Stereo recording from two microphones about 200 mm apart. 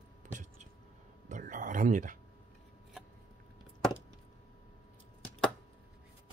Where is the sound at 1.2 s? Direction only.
40° right (ahead or behind).